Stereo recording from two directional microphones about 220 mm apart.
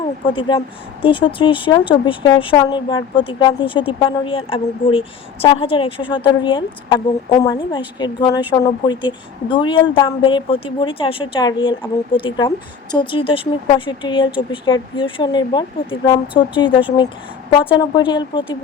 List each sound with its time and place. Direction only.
0.3 s a woman's voice: 20° left (ahead or behind)